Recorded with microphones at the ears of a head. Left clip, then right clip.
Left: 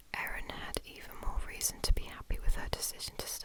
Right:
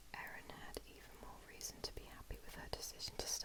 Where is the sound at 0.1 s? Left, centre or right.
Left.